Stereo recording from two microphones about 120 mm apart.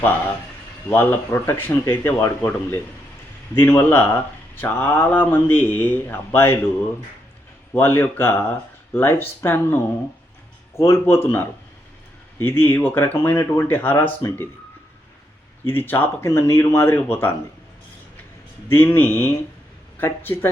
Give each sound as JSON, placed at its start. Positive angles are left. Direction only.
{"t": 0.9, "sound": "speech", "side_deg": 20}
{"t": 7.7, "sound": "speech", "side_deg": 20}
{"t": 15.6, "sound": "speech", "side_deg": 20}
{"t": 18.7, "sound": "speech", "side_deg": 20}